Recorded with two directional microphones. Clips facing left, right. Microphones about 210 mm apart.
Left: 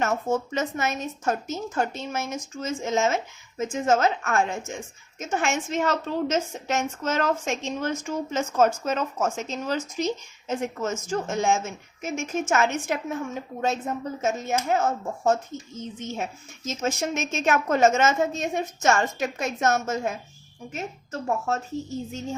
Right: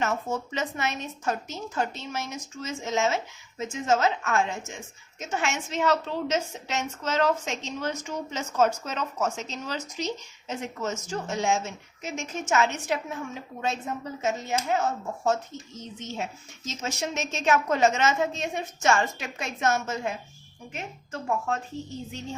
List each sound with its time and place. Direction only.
0.0 s a woman's voice: 45° left (ahead or behind)